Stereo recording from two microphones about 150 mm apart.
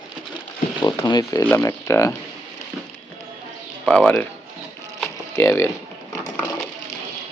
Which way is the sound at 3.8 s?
5° left (ahead or behind).